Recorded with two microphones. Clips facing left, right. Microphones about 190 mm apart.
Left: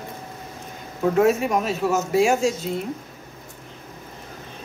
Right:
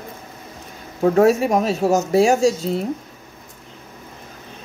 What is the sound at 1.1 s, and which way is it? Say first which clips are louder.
Speech: right 3 dB; 35° right (ahead or behind).